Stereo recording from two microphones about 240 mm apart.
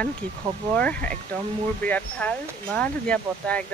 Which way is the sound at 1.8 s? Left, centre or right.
Centre.